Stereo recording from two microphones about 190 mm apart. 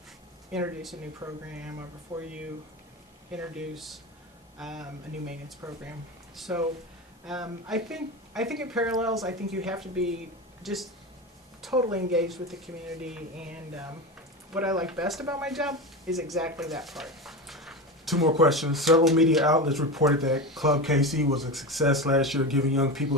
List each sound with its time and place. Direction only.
0.5 s speech: centre (ahead or behind)
1.2 s speech: 20° right (ahead or behind)
3.3 s speech: 5° right (ahead or behind)
5.6 s speech: 15° right (ahead or behind)
11.8 s speech: 15° right (ahead or behind)
12.3 s speech: centre (ahead or behind)